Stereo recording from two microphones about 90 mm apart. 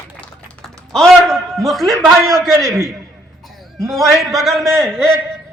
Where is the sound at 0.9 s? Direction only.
5° left (ahead or behind).